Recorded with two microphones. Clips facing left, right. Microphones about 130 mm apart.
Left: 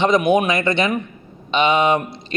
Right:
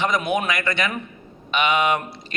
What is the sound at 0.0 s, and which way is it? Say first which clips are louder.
A man's voice: left 7 dB; 20° left (ahead or behind).